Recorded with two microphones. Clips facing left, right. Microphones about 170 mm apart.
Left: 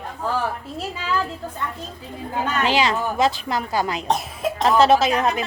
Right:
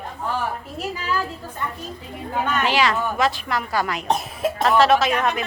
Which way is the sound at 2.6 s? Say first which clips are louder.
Left 1 dB; 25° left (ahead or behind).